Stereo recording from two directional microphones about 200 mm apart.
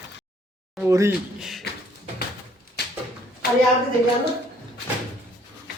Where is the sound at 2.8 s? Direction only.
55° left (ahead or behind).